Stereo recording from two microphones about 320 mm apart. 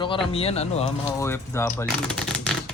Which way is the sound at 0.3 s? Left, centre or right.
Centre.